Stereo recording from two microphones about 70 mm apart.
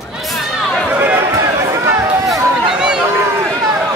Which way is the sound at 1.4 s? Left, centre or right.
Right.